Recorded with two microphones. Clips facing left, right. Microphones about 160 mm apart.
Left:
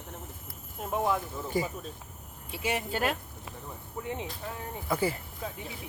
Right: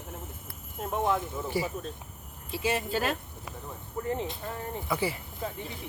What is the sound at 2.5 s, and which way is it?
Speech, 15° left (ahead or behind).